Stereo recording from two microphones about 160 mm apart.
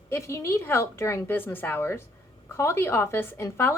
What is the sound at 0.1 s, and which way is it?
Speech, 15° left (ahead or behind).